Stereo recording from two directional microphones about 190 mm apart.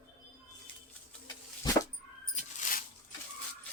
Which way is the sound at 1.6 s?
20° left (ahead or behind).